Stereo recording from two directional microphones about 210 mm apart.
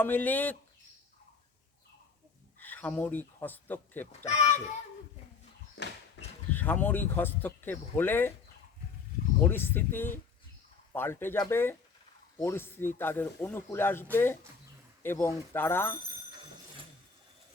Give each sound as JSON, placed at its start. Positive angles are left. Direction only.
{"t": 0.0, "sound": "speech", "side_deg": 10}
{"t": 2.6, "sound": "speech", "side_deg": 10}
{"t": 5.7, "sound": "a sound", "side_deg": 55}
{"t": 6.5, "sound": "speech", "side_deg": 10}
{"t": 9.4, "sound": "speech", "side_deg": 10}